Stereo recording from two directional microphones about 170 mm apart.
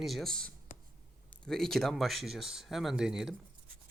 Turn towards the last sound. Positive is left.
turn(degrees=-5)  # may be behind; listen again after turning